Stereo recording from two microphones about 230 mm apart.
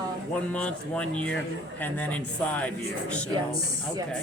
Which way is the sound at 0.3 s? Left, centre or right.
Centre.